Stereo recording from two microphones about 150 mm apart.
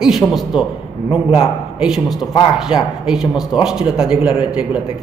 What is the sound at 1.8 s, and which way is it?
A man's voice, 5° right (ahead or behind).